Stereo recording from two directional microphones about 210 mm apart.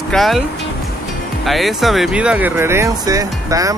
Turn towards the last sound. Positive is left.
turn(degrees=-15)  # may be behind; listen again after turning